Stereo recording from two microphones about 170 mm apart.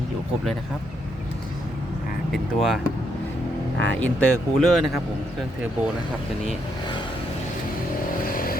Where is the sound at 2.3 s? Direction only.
Centre (ahead or behind).